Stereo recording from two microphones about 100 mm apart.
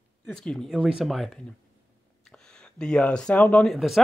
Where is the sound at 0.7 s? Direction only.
5° right (ahead or behind); by 3.6 s 10° left (ahead or behind).